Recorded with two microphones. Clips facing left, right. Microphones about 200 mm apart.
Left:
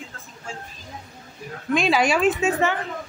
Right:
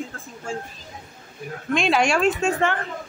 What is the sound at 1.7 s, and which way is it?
A man's voice, centre (ahead or behind).